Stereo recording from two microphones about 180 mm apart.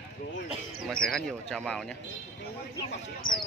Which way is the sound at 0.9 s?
5° left (ahead or behind).